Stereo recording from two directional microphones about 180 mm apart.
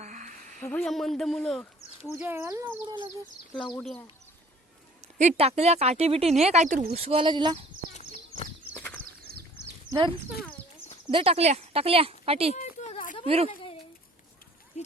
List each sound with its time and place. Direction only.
0.0 s a sound: 40° right (ahead or behind)
0.6 s speech: 5° left (ahead or behind)
2.1 s speech: 10° right (ahead or behind)
3.8 s speech: 5° left (ahead or behind)
5.1 s speech: 40° right (ahead or behind)
9.3 s goat: 60° right (ahead or behind)
9.9 s speech: 25° right (ahead or behind)
12.5 s a sound: 40° left (ahead or behind)
13.2 s speech: 35° right (ahead or behind)
14.8 s speech: 40° left (ahead or behind)